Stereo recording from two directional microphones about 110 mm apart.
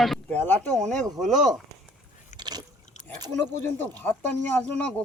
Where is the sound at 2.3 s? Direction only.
40° right (ahead or behind).